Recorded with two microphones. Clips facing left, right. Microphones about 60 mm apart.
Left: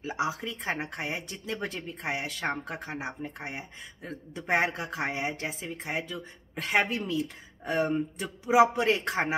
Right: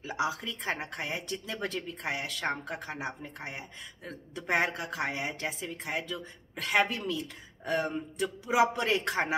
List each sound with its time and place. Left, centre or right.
0.0 s speech: left